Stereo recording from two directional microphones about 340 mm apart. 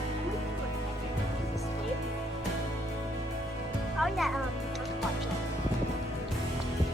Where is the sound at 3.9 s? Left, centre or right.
Centre.